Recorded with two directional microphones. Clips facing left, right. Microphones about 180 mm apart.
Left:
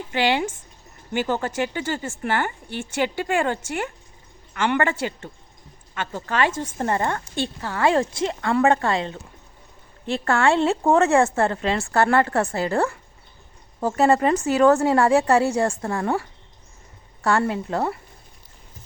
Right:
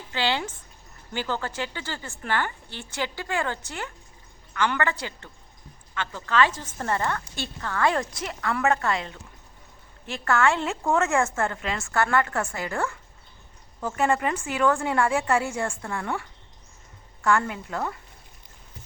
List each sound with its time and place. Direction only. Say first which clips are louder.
0.1 s speech: left 5 dB; 15° left (ahead or behind)
6.0 s speech: even; 45° left (ahead or behind)
6.6 s a woman's voice: left 4 dB; 25° left (ahead or behind)